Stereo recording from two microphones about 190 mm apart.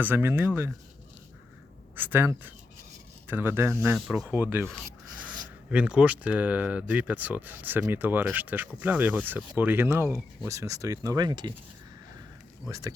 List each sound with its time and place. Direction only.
0.0 s speech: 10° right (ahead or behind)
2.0 s speech: 10° right (ahead or behind)
5.7 s speech: 5° right (ahead or behind); by 11.5 s 20° right (ahead or behind)
12.6 s speech: 15° right (ahead or behind)